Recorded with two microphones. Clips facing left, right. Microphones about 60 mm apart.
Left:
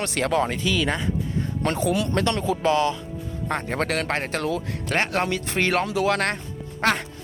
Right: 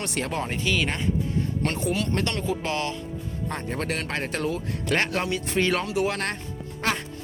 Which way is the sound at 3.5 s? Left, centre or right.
Left.